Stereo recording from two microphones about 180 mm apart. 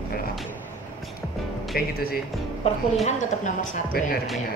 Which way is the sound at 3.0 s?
45° left (ahead or behind).